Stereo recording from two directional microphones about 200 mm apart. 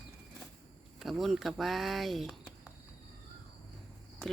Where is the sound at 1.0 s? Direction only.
Centre (ahead or behind).